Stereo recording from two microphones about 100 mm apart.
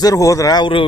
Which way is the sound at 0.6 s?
60° left (ahead or behind).